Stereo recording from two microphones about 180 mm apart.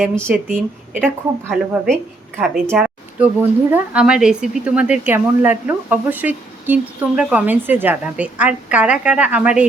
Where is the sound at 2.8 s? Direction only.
5° right (ahead or behind).